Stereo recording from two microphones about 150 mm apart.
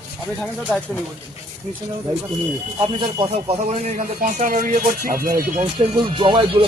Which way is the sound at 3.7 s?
55° right (ahead or behind).